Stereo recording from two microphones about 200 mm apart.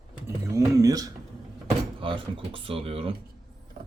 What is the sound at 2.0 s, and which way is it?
Speech, 25° right (ahead or behind).